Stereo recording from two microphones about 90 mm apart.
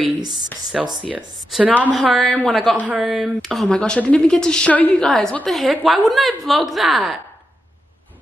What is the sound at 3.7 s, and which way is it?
A woman's voice, 15° left (ahead or behind).